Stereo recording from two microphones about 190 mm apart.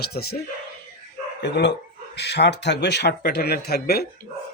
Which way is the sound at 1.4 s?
65° left (ahead or behind).